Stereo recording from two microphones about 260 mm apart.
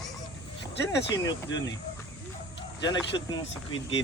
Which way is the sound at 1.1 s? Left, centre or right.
Centre.